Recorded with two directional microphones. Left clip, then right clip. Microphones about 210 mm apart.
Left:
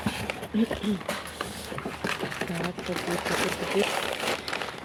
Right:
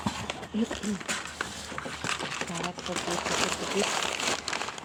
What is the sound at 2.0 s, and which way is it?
Sewing machine, 30° right (ahead or behind).